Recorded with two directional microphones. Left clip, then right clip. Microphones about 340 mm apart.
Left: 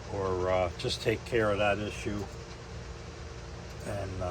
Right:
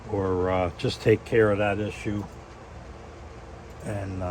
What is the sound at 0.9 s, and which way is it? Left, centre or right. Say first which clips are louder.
Speech: right 7 dB; right.